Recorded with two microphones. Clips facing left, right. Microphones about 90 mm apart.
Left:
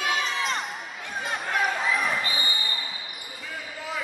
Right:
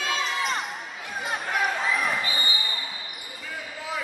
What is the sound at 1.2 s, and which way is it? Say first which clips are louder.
Basketball bounce: even; centre (ahead or behind).